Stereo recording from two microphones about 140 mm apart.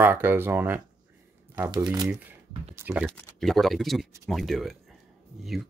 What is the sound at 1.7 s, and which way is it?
Speech, 30° right (ahead or behind).